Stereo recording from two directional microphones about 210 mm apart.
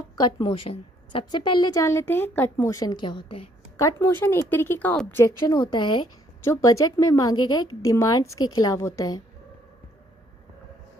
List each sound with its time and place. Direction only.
0.2 s a woman's voice: 20° left (ahead or behind)